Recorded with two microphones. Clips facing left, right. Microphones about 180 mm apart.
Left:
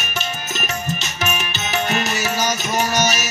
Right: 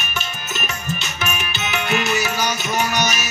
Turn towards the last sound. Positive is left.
turn(degrees=40)  # may be behind; listen again after turning